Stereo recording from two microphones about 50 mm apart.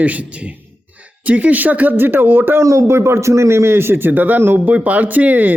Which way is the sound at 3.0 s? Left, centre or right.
Right.